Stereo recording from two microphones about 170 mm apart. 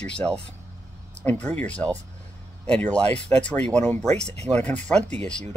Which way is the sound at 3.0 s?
35° right (ahead or behind).